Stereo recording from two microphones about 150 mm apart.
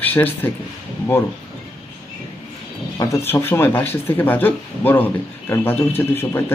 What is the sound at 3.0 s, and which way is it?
Speech, 20° left (ahead or behind).